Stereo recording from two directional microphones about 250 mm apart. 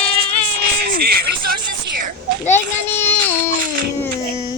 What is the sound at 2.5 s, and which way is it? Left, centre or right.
Child singing, centre.